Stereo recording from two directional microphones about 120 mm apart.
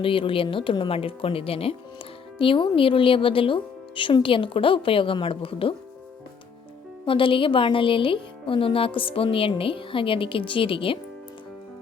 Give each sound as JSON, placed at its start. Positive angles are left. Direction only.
{"t": 0.0, "sound": "speech", "side_deg": 50}
{"t": 7.0, "sound": "speech", "side_deg": 45}